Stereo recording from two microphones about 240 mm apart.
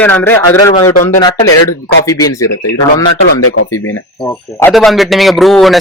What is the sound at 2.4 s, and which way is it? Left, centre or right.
Speech, left.